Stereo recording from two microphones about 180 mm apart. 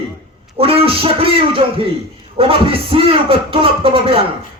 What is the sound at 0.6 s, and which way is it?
Speech, 30° right (ahead or behind).